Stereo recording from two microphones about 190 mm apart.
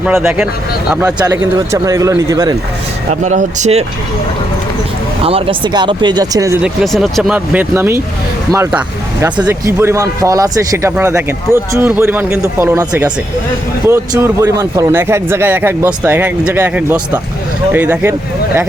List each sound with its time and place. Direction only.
0.0 s speech: 5° right (ahead or behind)
1.0 s speech: 15° right (ahead or behind)
3.1 s speech: 40° right (ahead or behind)
5.2 s speech: 30° right (ahead or behind)
6.6 s speech: centre (ahead or behind)